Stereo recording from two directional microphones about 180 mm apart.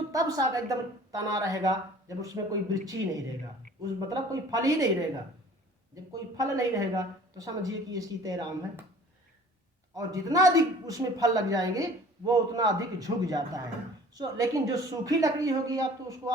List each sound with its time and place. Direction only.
0.1 s speech: 20° right (ahead or behind)
5.9 s speech: 20° right (ahead or behind)
9.9 s speech: 20° right (ahead or behind)